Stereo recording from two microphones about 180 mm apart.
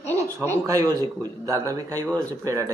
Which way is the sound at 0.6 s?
20° right (ahead or behind).